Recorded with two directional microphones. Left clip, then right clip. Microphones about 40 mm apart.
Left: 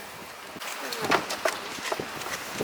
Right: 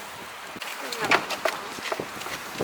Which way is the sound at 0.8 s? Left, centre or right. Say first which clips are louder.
Right 3 dB; centre.